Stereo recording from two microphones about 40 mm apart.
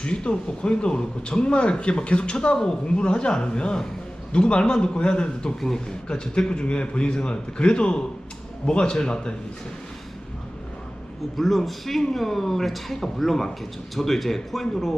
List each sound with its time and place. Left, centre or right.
0.0 s a man's voice: left
5.5 s a man's voice: centre
11.3 s a man's voice: centre